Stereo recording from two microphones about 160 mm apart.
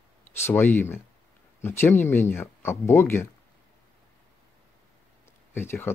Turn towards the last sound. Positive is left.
turn(degrees=15)  # may be behind; listen again after turning